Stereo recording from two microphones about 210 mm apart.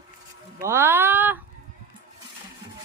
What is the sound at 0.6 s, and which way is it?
Speech, 10° right (ahead or behind).